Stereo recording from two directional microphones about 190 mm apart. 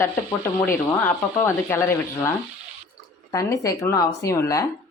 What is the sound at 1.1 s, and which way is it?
Speech, 15° left (ahead or behind).